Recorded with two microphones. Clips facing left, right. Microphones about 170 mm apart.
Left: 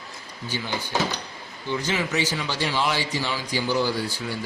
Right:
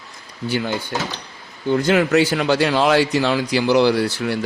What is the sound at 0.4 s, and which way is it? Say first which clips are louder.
A man's voice: right 8 dB; 60° right (ahead or behind).